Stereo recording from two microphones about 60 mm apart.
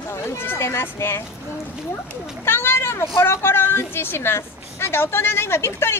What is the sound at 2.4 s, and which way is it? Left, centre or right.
A woman's voice, left.